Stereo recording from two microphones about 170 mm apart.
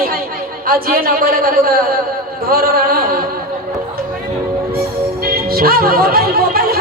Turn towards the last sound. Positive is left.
turn(degrees=-60)  # may be behind; listen again after turning